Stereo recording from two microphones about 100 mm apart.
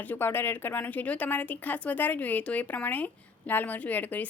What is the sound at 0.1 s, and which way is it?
Speech, 20° left (ahead or behind).